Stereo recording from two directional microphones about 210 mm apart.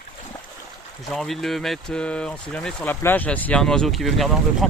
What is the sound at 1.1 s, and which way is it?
Speech, centre (ahead or behind).